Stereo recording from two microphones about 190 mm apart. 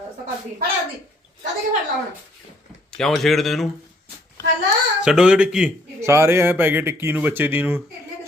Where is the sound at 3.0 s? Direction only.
Centre (ahead or behind).